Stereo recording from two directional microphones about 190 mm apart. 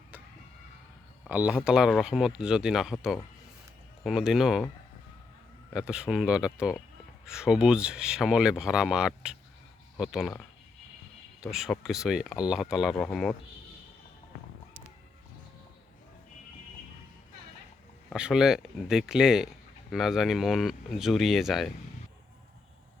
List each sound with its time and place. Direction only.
1.3 s speech: 10° right (ahead or behind)
5.7 s speech: 5° right (ahead or behind)
11.5 s speech: centre (ahead or behind)
18.1 s speech: 5° right (ahead or behind)